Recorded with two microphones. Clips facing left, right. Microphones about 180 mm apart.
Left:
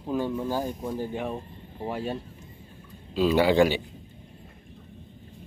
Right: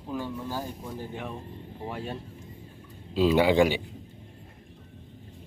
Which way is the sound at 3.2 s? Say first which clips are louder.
Left 1 dB; 20° right (ahead or behind).